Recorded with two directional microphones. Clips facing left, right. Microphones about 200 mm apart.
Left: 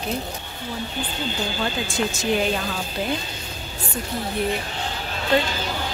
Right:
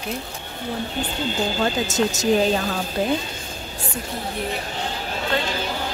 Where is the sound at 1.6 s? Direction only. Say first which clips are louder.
Right 4 dB; 40° right (ahead or behind).